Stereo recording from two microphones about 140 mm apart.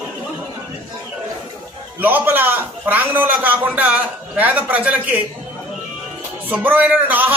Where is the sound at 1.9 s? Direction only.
15° right (ahead or behind).